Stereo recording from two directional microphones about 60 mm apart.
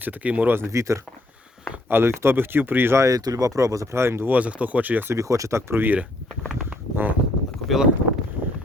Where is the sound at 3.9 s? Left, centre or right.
Right.